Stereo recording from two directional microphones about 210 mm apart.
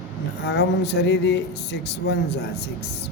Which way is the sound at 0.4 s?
50° left (ahead or behind).